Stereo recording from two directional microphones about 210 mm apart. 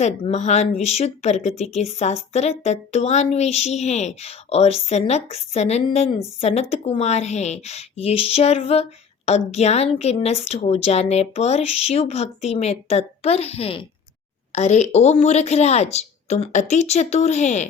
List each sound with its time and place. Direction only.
0.0 s speech: 35° left (ahead or behind)